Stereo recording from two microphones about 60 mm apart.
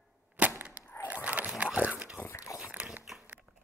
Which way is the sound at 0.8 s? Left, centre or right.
Right.